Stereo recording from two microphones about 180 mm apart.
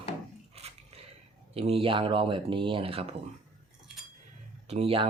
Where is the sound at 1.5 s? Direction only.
35° right (ahead or behind).